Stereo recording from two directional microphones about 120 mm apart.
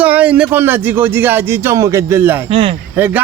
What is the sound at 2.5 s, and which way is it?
Speech, 50° right (ahead or behind).